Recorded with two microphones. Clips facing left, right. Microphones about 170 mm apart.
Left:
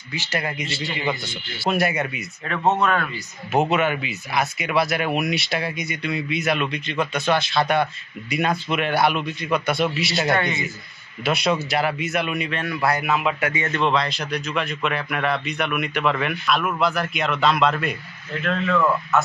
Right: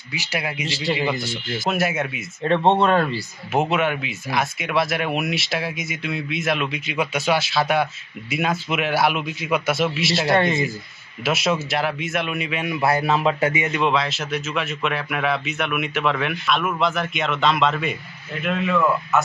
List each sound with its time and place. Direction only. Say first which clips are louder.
0.1 s speech: even; 10° right (ahead or behind)
2.4 s speech: right 4 dB; 30° right (ahead or behind)
3.5 s speech: left 1 dB; centre (ahead or behind)
12.6 s speech: right 3 dB; 25° right (ahead or behind)
13.6 s speech: right 1 dB; 10° right (ahead or behind)